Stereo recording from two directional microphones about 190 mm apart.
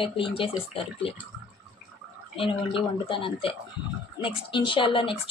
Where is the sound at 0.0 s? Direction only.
30° left (ahead or behind).